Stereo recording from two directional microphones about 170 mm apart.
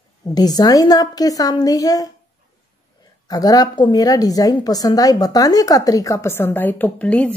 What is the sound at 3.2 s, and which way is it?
A woman's voice, 20° left (ahead or behind).